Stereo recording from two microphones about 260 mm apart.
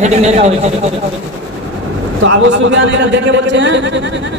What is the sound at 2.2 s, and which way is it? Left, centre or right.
A man's voice, right.